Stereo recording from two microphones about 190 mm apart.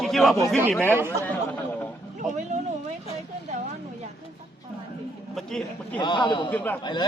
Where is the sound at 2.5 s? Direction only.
35° right (ahead or behind).